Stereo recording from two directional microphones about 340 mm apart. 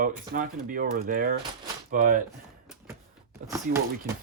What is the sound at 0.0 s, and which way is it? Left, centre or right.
Speech, right.